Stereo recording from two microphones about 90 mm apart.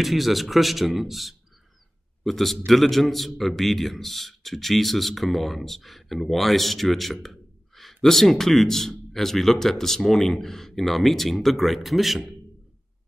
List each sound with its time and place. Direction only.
0.0 s a man's voice: centre (ahead or behind)